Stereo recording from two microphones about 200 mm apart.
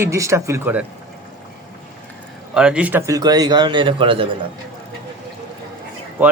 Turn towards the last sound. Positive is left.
turn(degrees=-10)  # may be behind; listen again after turning